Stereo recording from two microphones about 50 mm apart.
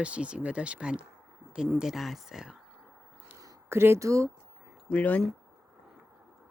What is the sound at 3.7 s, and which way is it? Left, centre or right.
Speech, right.